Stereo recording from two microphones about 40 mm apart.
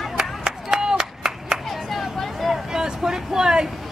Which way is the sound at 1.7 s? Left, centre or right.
Centre.